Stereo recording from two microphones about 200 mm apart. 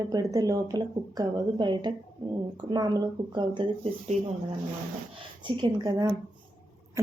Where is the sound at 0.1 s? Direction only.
20° right (ahead or behind).